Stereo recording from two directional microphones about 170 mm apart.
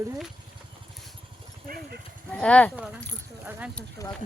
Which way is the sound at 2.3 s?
5° left (ahead or behind).